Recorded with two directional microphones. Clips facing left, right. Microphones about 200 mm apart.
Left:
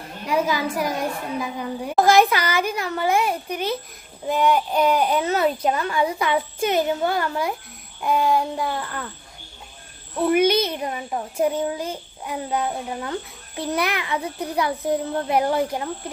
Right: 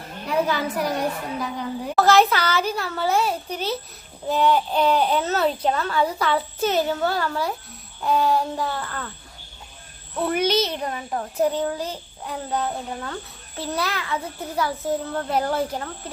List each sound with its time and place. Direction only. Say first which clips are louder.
0.3 s a child's voice: left 1 dB; 10° left (ahead or behind)
10.2 s a child's voice: left 4 dB; 10° left (ahead or behind)